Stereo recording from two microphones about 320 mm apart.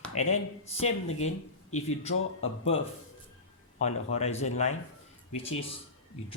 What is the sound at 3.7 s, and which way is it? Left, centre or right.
Speech, left.